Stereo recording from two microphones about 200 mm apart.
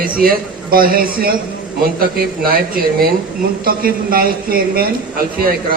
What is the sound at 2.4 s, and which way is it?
A man's voice, 45° right (ahead or behind).